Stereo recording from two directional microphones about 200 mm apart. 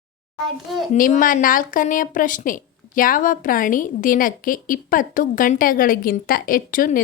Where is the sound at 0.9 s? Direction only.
45° left (ahead or behind).